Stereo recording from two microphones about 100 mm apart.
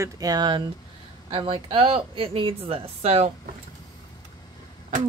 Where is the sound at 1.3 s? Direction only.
65° right (ahead or behind); by 3.3 s 90° right.